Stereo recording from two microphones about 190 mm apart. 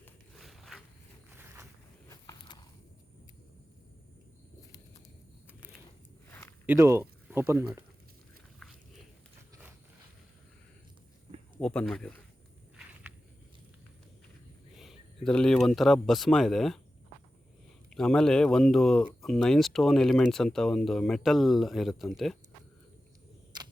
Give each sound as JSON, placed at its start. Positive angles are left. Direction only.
{"t": 0.3, "sound": "a sound", "side_deg": 0}
{"t": 2.0, "sound": "a sound", "side_deg": 20}
{"t": 6.7, "sound": "speech", "side_deg": -15}
{"t": 11.6, "sound": "speech", "side_deg": 5}
{"t": 12.8, "sound": "walk", "side_deg": -5}
{"t": 14.8, "sound": "speech", "side_deg": 0}
{"t": 17.9, "sound": "speech", "side_deg": 5}